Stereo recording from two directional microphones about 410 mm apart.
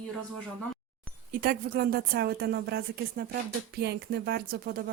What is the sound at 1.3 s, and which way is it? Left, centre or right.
Speech, right.